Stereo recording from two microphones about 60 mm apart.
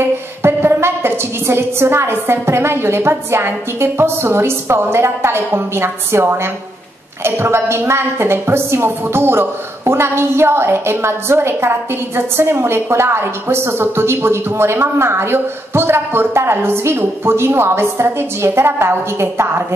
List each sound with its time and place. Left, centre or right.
0.0 s a woman's voice: right